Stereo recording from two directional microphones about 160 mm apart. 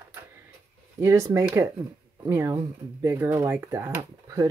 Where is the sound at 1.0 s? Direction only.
20° right (ahead or behind).